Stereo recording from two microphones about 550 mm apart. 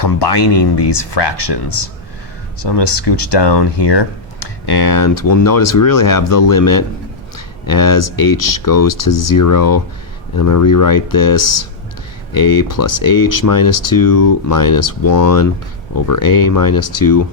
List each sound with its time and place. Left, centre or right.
0.0 s speech: left